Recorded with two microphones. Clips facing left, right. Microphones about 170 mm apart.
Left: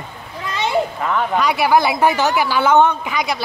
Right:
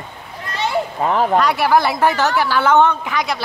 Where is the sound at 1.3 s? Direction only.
5° left (ahead or behind).